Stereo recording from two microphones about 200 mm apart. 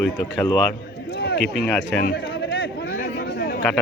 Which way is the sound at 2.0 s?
55° left (ahead or behind).